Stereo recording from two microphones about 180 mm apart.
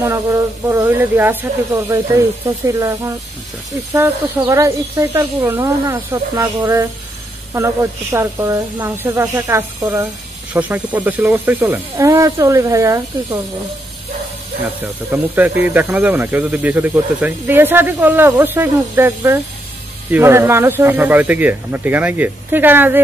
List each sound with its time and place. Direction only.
0.0 s speech: 15° right (ahead or behind)
14.8 s speech: 10° right (ahead or behind)